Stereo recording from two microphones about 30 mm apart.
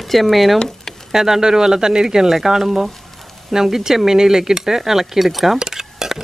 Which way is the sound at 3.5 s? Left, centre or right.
Centre.